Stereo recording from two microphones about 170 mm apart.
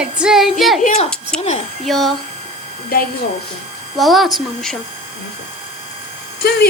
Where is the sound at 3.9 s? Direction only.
Centre (ahead or behind).